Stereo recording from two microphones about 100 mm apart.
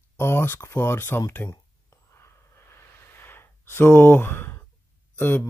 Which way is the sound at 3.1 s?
25° left (ahead or behind).